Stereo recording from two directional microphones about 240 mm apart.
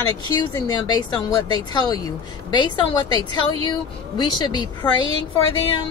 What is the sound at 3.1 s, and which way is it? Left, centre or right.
Speech, right.